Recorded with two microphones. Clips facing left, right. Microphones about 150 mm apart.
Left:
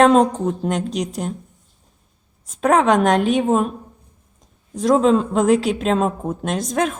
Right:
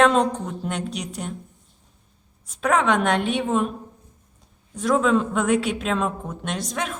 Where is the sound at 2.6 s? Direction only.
40° left (ahead or behind).